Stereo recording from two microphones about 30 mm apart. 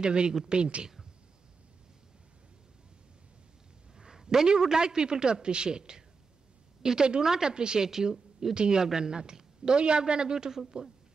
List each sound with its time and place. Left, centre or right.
0.0 s speech: right
4.0 s a man's voice: right
7.5 s a woman's voice: right